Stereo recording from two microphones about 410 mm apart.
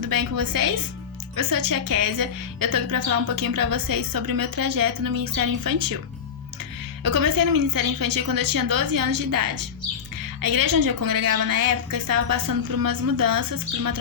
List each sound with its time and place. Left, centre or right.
0.0 s a woman's voice: right
7.0 s a woman's voice: right